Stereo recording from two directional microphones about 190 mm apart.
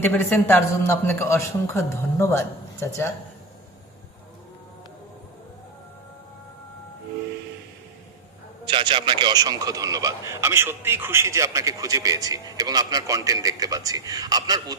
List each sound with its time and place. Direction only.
0.0 s a man's voice: 10° left (ahead or behind)
8.6 s speech: 25° right (ahead or behind)